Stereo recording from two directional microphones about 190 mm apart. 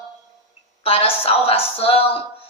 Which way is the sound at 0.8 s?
30° left (ahead or behind).